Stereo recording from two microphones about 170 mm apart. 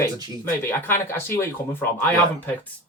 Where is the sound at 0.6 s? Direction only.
10° left (ahead or behind).